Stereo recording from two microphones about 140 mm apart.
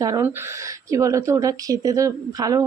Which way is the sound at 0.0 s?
25° right (ahead or behind).